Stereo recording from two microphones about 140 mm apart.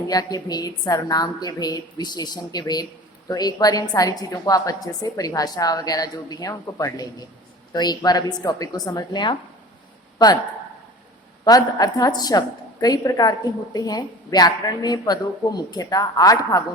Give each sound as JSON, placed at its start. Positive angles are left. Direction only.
{"t": 0.1, "sound": "a woman's voice", "side_deg": 30}
{"t": 11.4, "sound": "a woman's voice", "side_deg": 25}